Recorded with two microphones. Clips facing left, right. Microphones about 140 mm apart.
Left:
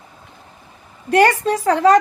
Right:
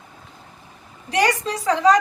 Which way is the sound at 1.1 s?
55° left (ahead or behind).